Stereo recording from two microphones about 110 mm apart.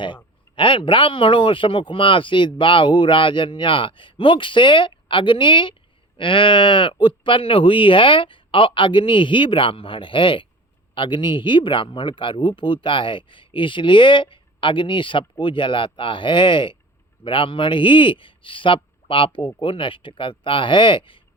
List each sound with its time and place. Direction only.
0.5 s speech: 50° left (ahead or behind)